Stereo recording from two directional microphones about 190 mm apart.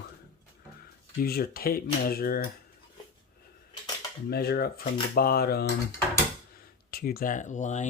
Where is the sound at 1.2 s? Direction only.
50° left (ahead or behind).